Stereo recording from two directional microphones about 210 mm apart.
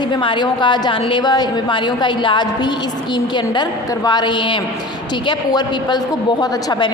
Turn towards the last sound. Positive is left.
turn(degrees=20)  # may be behind; listen again after turning